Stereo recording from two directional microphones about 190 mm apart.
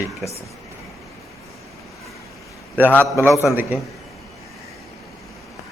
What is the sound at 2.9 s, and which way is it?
Speech, 10° left (ahead or behind).